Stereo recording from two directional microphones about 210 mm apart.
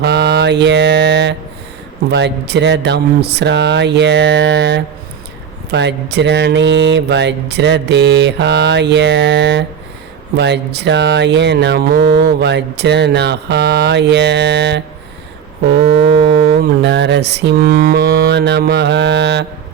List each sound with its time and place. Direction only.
0.0 s mantra: 55° right (ahead or behind)
2.0 s a sound: 55° right (ahead or behind)
10.3 s speech: 55° right (ahead or behind)
16.1 s speech: 55° right (ahead or behind)